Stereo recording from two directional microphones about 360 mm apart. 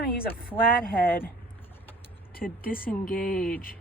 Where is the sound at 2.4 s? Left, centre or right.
Left.